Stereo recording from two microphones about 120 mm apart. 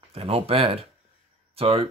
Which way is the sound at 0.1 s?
55° right (ahead or behind).